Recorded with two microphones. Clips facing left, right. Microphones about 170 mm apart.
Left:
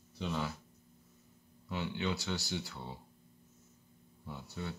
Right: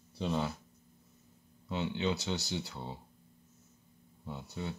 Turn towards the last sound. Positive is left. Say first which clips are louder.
# right 2 dB
turn(degrees=-20)  # may be behind; listen again after turning